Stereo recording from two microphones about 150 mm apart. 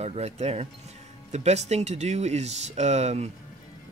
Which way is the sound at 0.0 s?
45° right (ahead or behind).